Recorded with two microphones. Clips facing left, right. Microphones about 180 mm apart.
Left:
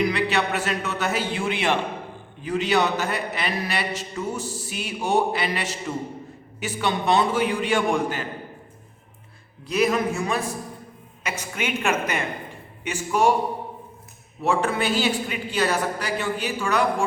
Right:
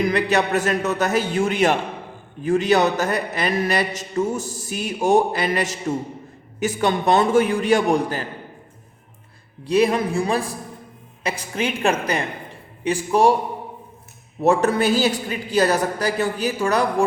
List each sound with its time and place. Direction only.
0.0 s a man's voice: 45° right (ahead or behind)
9.6 s a woman's voice: 30° right (ahead or behind)
14.4 s a woman's voice: 40° right (ahead or behind)